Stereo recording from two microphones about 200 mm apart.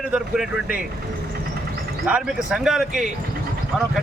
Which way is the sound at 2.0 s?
5° right (ahead or behind).